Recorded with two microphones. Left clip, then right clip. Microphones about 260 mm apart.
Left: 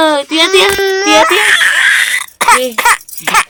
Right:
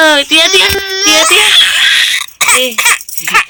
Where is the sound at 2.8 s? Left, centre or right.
Centre.